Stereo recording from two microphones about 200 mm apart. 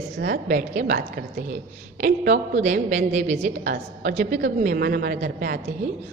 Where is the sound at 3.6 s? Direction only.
50° right (ahead or behind).